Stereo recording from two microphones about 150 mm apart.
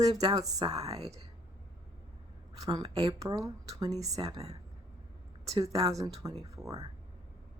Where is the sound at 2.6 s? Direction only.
25° right (ahead or behind).